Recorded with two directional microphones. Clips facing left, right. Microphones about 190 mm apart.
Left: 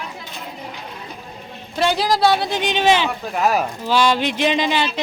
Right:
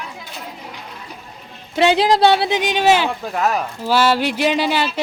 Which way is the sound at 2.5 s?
10° right (ahead or behind).